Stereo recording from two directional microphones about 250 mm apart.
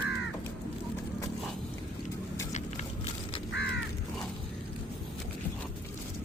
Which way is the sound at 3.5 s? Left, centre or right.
Left.